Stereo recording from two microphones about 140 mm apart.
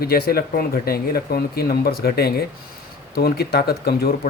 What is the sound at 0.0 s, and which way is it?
Speech, 90° left.